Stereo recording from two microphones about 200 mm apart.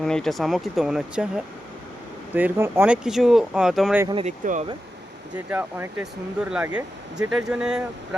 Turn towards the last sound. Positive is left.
turn(degrees=-5)  # may be behind; listen again after turning